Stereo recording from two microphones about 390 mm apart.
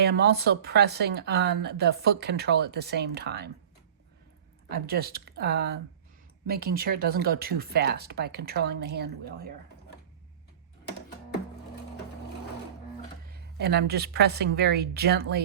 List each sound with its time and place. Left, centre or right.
0.0 s speech: right
4.7 s speech: right
13.3 s speech: right